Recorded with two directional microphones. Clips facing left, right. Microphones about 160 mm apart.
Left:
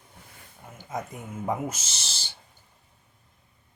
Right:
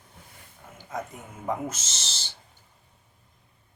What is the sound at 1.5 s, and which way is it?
Owl, 10° left (ahead or behind).